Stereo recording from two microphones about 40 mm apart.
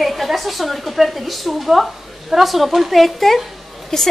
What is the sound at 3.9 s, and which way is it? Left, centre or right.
Speech, centre.